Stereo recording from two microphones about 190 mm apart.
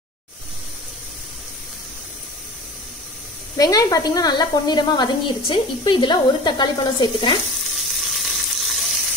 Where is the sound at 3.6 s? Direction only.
20° left (ahead or behind).